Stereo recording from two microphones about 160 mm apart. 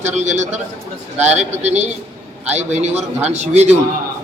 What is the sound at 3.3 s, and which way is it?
Speech, 45° right (ahead or behind).